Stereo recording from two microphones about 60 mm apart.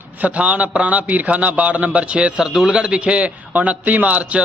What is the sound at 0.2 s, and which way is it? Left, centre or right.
A man's voice, right.